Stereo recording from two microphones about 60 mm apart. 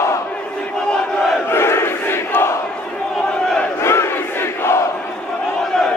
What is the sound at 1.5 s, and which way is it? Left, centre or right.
Crowd, left.